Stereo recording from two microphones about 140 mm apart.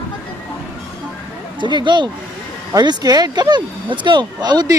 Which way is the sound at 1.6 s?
35° right (ahead or behind).